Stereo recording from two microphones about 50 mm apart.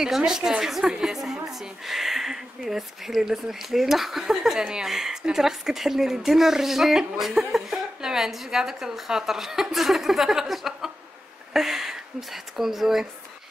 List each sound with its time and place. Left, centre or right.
0.0 s a woman's voice: centre